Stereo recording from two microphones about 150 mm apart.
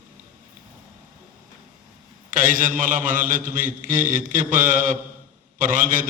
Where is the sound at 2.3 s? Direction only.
60° right (ahead or behind).